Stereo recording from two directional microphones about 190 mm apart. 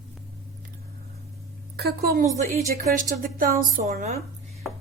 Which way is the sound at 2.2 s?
40° right (ahead or behind).